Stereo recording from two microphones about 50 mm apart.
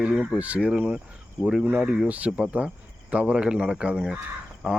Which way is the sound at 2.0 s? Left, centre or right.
Right.